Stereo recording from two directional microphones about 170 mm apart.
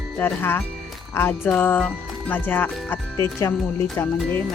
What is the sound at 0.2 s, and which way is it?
Speech, 10° left (ahead or behind).